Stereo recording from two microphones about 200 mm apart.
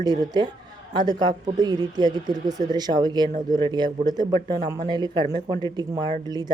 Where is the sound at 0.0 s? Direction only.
20° right (ahead or behind).